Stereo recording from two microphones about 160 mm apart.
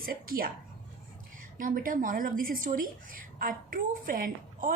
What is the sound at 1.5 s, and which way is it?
A woman's voice, 60° right (ahead or behind).